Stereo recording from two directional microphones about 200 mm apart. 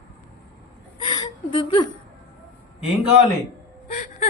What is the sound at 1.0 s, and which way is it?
Chuckle, 20° left (ahead or behind).